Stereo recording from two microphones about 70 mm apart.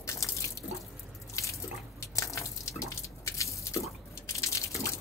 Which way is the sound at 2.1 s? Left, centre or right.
Left.